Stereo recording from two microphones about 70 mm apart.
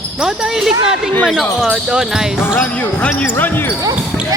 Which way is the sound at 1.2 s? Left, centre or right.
Centre.